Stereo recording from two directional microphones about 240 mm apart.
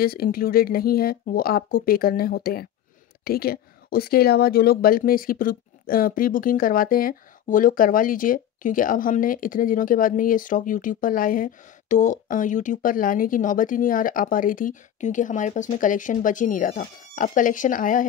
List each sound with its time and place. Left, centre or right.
0.0 s speech: left